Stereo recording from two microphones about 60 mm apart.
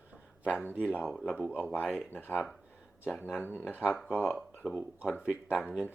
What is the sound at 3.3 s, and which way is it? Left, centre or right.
Speech, left.